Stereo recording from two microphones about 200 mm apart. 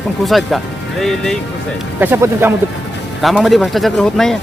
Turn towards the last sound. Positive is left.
turn(degrees=0)  # may be behind; listen again after turning